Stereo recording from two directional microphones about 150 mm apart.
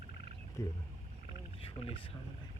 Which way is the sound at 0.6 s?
20° left (ahead or behind).